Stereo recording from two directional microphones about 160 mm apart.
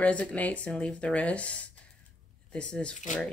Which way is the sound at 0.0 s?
10° left (ahead or behind).